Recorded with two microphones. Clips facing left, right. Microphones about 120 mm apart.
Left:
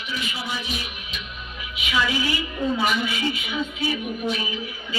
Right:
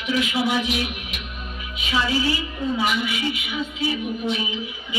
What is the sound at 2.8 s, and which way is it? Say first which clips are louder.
Speech: even; 15° right (ahead or behind).